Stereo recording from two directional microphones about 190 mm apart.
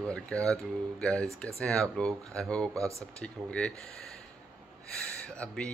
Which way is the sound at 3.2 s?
5° left (ahead or behind).